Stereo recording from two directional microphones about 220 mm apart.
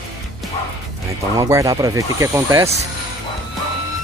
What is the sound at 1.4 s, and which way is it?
Speech, 15° right (ahead or behind).